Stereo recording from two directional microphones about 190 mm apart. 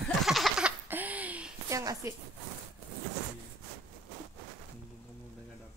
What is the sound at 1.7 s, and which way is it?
Speech, 15° right (ahead or behind).